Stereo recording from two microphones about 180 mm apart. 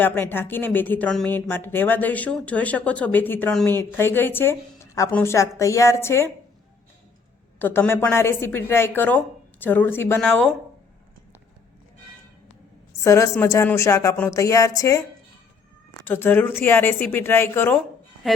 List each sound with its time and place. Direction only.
0.0 s speech: 10° left (ahead or behind)
7.6 s speech: 10° left (ahead or behind)
13.0 s speech: 15° left (ahead or behind)
16.0 s speech: 10° left (ahead or behind)
18.2 s speech: centre (ahead or behind)